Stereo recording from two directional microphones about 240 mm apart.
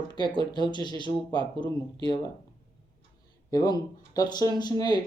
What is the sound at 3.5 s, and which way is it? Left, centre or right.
Speech, centre.